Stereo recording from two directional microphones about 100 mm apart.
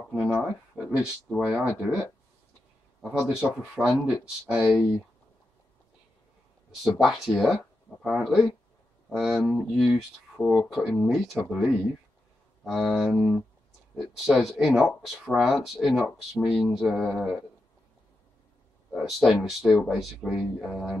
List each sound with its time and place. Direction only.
0.1 s speech: 5° right (ahead or behind)
7.0 s speech: centre (ahead or behind)
18.9 s speech: centre (ahead or behind)